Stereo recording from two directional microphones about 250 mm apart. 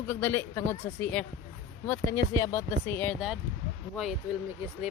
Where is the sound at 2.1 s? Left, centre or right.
Centre.